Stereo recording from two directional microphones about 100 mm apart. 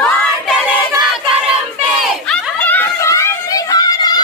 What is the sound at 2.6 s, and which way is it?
Snicker, 15° left (ahead or behind).